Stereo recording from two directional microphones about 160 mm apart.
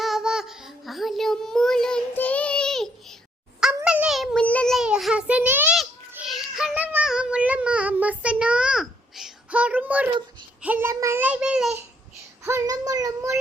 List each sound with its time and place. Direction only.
0.0 s child singing: centre (ahead or behind)
12.4 s child singing: 20° right (ahead or behind)